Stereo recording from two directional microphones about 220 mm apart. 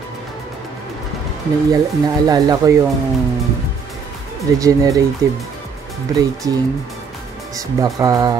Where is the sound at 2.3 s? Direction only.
20° right (ahead or behind).